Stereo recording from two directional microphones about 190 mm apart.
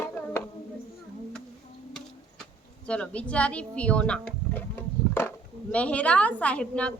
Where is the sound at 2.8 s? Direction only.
5° left (ahead or behind).